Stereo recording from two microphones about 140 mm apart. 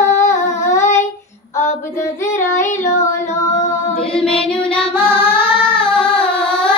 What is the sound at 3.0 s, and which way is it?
Female singing, 20° left (ahead or behind).